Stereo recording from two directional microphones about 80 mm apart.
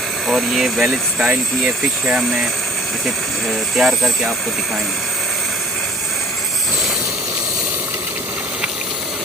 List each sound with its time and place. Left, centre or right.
0.3 s speech: centre
3.8 s speech: centre